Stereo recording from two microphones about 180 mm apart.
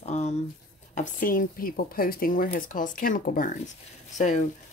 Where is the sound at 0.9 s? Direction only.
50° left (ahead or behind).